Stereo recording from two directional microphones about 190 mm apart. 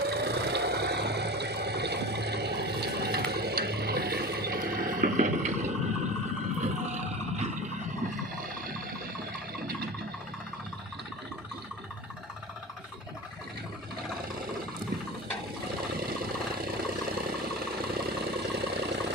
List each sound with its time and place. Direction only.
0.0 s vehicle: 60° right (ahead or behind); by 5.7 s 40° right (ahead or behind)
6.6 s a sound: 35° right (ahead or behind)
15.9 s vehicle: 55° right (ahead or behind)